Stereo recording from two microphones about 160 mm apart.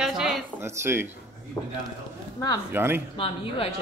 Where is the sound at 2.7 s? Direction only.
15° right (ahead or behind).